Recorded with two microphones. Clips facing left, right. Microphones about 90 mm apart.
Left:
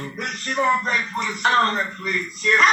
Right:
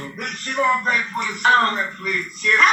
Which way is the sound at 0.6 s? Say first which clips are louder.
Right 1 dB; 10° left (ahead or behind).